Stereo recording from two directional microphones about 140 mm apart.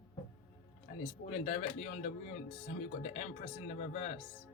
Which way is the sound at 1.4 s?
55° left (ahead or behind).